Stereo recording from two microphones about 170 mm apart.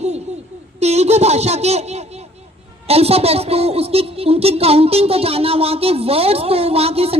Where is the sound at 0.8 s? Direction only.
40° right (ahead or behind).